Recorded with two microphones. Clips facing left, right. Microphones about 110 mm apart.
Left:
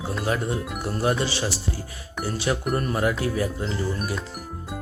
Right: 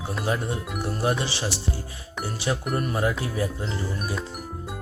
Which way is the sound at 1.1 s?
20° right (ahead or behind).